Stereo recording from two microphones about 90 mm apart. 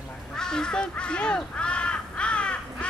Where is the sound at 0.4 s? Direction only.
10° left (ahead or behind).